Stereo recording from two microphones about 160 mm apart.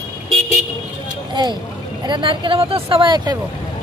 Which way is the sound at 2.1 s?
30° right (ahead or behind).